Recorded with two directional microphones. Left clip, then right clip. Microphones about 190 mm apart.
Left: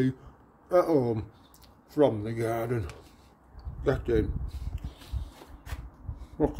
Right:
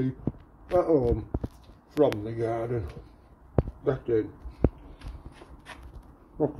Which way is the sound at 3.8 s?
35° left (ahead or behind).